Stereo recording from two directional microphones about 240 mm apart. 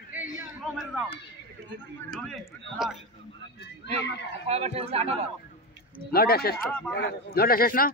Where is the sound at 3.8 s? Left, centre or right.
Left.